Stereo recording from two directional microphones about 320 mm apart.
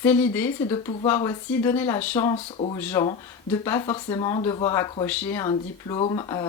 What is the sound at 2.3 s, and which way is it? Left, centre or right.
Speech, centre.